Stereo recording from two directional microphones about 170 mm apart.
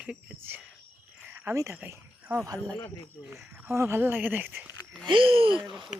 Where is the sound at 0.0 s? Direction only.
10° right (ahead or behind).